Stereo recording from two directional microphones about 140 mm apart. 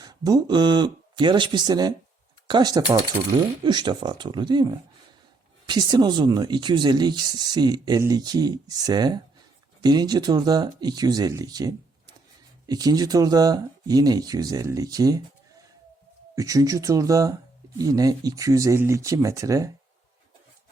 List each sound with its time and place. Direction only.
0.0 s speech: 30° right (ahead or behind)
16.3 s speech: 25° right (ahead or behind)